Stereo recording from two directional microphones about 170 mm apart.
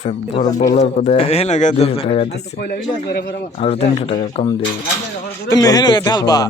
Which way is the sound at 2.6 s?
70° left (ahead or behind).